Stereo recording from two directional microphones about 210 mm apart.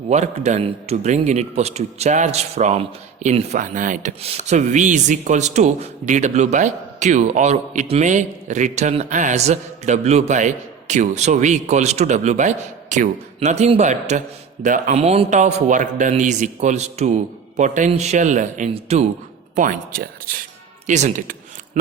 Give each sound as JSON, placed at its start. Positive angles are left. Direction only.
{"t": 0.1, "sound": "a man's voice", "side_deg": -30}